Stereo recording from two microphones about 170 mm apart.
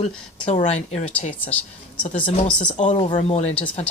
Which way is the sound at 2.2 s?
30° left (ahead or behind).